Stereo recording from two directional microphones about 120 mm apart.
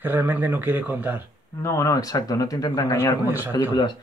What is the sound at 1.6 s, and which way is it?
Speech, 25° left (ahead or behind).